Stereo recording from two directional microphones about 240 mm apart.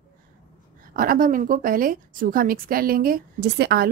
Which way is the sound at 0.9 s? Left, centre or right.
Right.